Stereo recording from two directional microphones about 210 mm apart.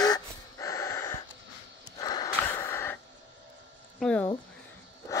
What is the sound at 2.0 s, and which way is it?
Snort, 15° left (ahead or behind).